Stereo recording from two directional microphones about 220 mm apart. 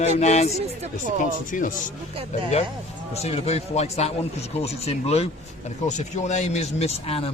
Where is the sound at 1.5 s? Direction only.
35° left (ahead or behind).